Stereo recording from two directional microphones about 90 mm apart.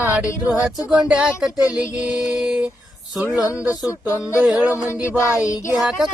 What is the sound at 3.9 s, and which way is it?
Music, 30° left (ahead or behind).